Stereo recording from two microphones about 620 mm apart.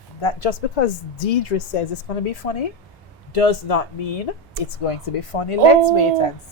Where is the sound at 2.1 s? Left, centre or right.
Left.